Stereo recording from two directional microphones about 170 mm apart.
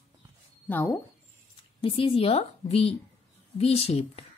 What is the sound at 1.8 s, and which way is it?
Speech, 30° left (ahead or behind).